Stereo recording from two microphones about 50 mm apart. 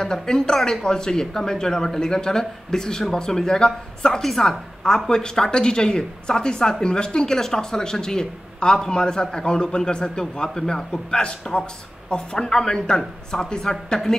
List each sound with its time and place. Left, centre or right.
0.0 s a woman's voice: centre